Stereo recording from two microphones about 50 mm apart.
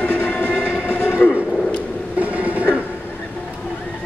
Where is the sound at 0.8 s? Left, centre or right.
Left.